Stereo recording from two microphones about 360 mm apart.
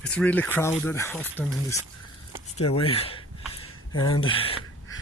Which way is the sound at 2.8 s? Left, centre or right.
Centre.